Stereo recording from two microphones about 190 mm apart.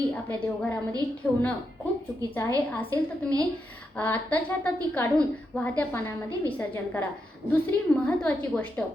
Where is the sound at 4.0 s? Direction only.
10° left (ahead or behind).